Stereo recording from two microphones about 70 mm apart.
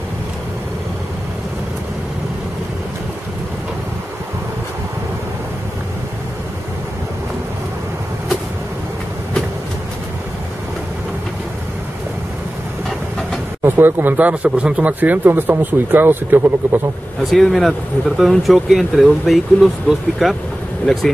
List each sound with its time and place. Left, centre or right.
13.7 s speech: right
17.3 s speech: centre
20.8 s speech: centre